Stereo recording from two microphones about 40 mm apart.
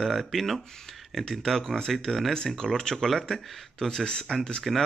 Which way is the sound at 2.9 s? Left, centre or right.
Centre.